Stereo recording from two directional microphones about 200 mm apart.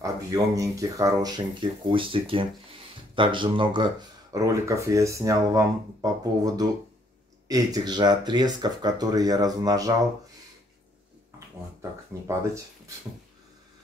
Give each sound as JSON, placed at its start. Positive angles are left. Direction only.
{"t": 0.0, "sound": "speech", "side_deg": -15}
{"t": 12.3, "sound": "speech", "side_deg": -15}